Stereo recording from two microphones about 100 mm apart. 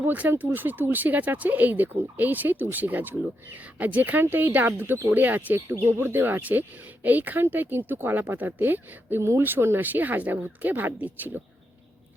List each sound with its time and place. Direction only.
0.0 s speech: 20° right (ahead or behind)